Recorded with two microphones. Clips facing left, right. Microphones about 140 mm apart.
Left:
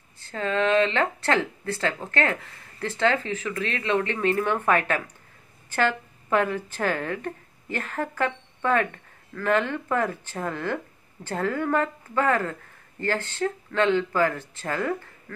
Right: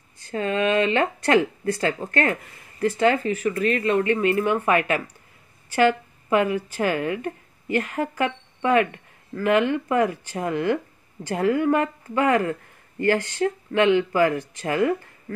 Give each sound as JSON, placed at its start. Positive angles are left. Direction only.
{"t": 0.2, "sound": "speech", "side_deg": -15}